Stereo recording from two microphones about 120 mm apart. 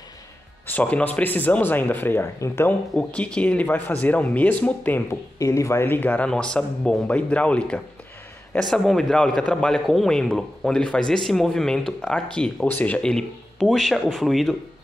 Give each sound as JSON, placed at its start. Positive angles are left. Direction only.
{"t": 0.7, "sound": "speech", "side_deg": 10}
{"t": 3.0, "sound": "speech", "side_deg": 10}
{"t": 5.4, "sound": "a man's voice", "side_deg": 25}